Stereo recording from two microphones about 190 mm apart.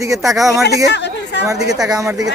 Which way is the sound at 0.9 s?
65° left (ahead or behind).